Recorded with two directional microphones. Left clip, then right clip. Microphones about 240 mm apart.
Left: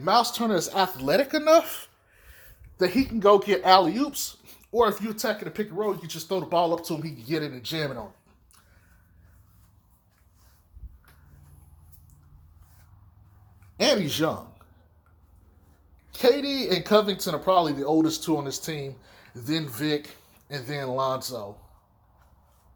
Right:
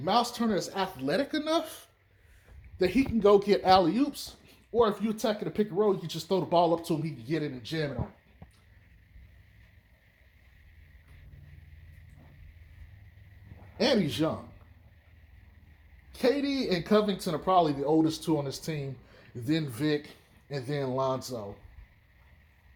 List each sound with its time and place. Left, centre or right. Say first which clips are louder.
0.0 s speech: left 5 dB; centre
0.3 s speech: left 6 dB; left
2.7 s speech: left 3 dB; centre
3.2 s speech: left 3 dB; centre
4.1 s a sound: left 6 dB; centre
5.1 s speech: left 1 dB; centre
7.3 s speech: left 4 dB; centre
13.7 s speech: left 4 dB; centre
16.1 s speech: left 5 dB; centre